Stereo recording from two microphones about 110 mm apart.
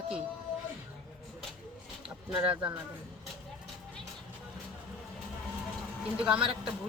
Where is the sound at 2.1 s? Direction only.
5° right (ahead or behind).